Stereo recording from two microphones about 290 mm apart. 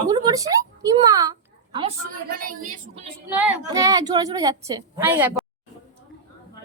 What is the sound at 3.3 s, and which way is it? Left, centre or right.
A woman's voice, centre.